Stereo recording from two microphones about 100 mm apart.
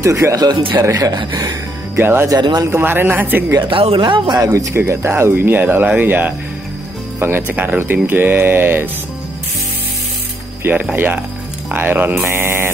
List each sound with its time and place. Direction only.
0.0 s speech: 30° right (ahead or behind)
0.5 s speech: 55° right (ahead or behind)
0.7 s speech: 35° right (ahead or behind)
1.1 s speech: 45° right (ahead or behind)
2.0 s speech: 20° right (ahead or behind)
2.2 s speech: 45° right (ahead or behind)
2.7 s speech: 20° right (ahead or behind)
3.6 s speech: 65° right (ahead or behind)
4.4 s speech: 35° right (ahead or behind)
10.9 s speech: 15° right (ahead or behind)